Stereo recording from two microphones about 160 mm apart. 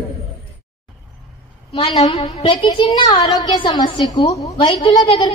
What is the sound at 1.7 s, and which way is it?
A woman's voice, 35° left (ahead or behind).